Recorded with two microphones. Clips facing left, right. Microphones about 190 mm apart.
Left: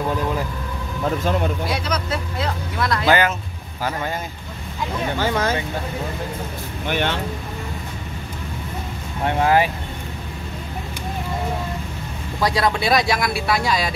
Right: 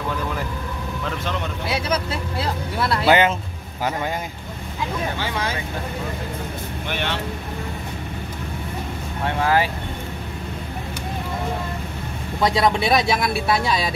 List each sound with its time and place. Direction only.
1.0 s speech: 40° left (ahead or behind)
1.9 s speech: 30° right (ahead or behind)
5.2 s speech: 45° left (ahead or behind)
6.9 s speech: 50° left (ahead or behind)
9.4 s speech: 20° left (ahead or behind)
12.4 s speech: 25° right (ahead or behind)